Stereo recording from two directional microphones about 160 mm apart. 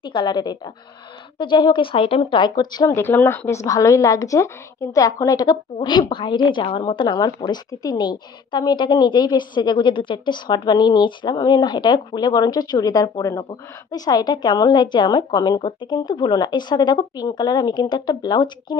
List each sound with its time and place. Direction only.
0.0 s a woman's voice: 30° left (ahead or behind)